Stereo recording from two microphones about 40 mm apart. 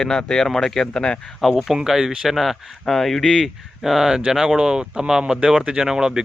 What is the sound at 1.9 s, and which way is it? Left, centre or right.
Speech, centre.